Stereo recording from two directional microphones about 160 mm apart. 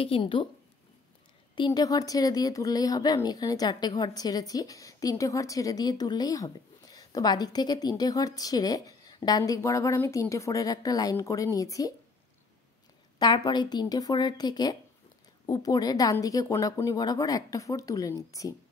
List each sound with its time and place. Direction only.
0.0 s a woman's voice: 35° left (ahead or behind)
1.5 s speech: 25° left (ahead or behind)
13.2 s speech: 25° left (ahead or behind)